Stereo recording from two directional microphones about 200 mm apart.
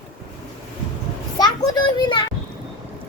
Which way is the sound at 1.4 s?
20° left (ahead or behind).